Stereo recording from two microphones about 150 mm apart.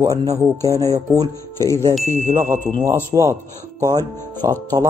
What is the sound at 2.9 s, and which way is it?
Speech, 20° right (ahead or behind).